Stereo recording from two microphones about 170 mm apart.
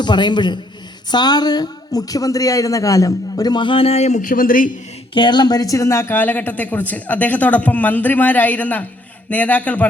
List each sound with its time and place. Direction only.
0.0 s a woman's voice: 25° left (ahead or behind); by 4.7 s 55° left (ahead or behind)
5.1 s a woman's voice: 25° left (ahead or behind); by 9.8 s 10° left (ahead or behind)